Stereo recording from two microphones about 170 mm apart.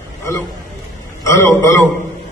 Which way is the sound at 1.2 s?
15° left (ahead or behind).